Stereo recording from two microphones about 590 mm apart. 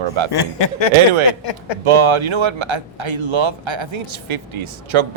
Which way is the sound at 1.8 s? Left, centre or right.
Right.